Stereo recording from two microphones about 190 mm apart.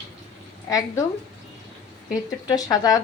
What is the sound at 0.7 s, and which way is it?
Speech, 20° left (ahead or behind).